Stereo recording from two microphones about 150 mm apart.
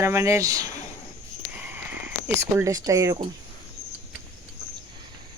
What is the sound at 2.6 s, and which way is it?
Speech, 25° right (ahead or behind).